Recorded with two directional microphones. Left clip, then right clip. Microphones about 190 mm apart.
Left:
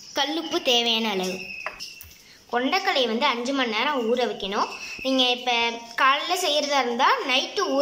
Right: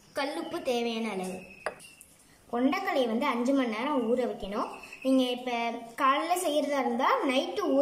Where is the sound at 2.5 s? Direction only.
5° right (ahead or behind).